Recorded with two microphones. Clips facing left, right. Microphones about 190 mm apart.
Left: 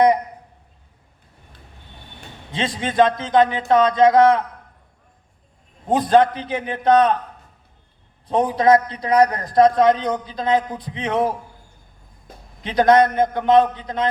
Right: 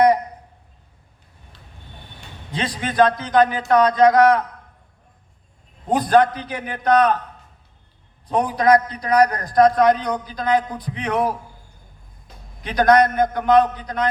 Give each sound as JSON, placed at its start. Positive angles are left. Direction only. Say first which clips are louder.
{"t": 2.5, "sound": "a man's voice", "louder": "left 1 dB", "side_deg": 20}
{"t": 5.9, "sound": "a man's voice", "louder": "left 1 dB", "side_deg": 25}
{"t": 8.3, "sound": "a man's voice", "louder": "left 1 dB", "side_deg": 25}
{"t": 12.6, "sound": "a man's voice", "louder": "left 1 dB", "side_deg": 25}